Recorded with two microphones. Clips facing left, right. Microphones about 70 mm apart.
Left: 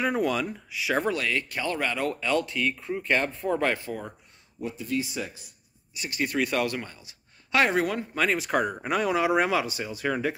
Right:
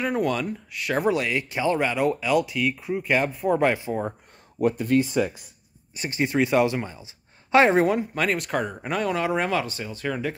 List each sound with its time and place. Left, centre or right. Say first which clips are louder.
0.0 s speech: right 1 dB; centre
1.0 s speech: right 4 dB; centre
4.6 s speech: right 9 dB; right
5.9 s speech: right 4 dB; right
8.0 s speech: right 1 dB; centre